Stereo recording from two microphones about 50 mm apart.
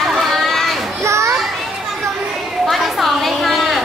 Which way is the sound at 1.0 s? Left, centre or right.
Right.